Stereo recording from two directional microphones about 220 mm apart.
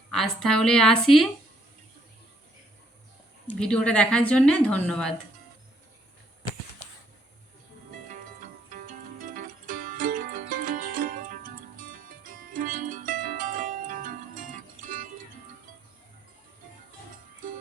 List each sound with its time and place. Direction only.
0.1 s a woman's voice: centre (ahead or behind)
3.4 s a woman's voice: 5° left (ahead or behind)
8.7 s music: 40° right (ahead or behind)